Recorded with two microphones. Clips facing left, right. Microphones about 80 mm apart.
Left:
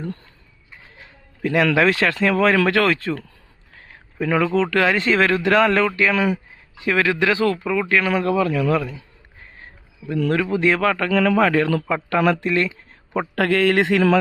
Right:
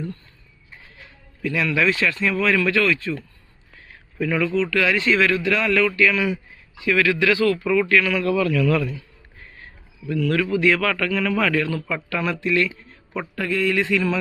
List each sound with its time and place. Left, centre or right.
1.4 s a man's voice: left
1.7 s speech: left
4.5 s speech: left; by 8.0 s centre
8.0 s a man's voice: left
10.0 s speech: left
11.1 s speech: left
13.3 s a man's voice: left